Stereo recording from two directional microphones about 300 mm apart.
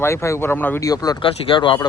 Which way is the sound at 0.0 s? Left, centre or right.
Centre.